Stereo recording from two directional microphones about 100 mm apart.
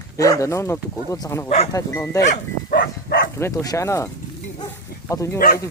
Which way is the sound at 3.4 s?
35° left (ahead or behind).